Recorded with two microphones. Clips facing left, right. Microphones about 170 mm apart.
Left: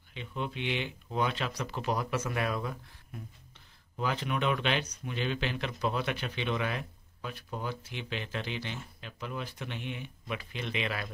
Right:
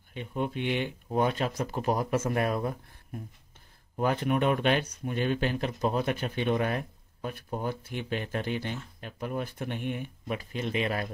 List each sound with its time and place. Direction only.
0.1 s speech: 50° right (ahead or behind)
4.0 s speech: 50° right (ahead or behind)